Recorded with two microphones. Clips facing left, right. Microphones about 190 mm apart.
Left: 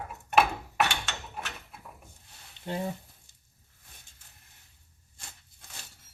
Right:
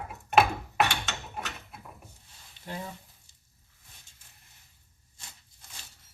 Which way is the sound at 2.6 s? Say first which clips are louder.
Left 6 dB; 30° left (ahead or behind).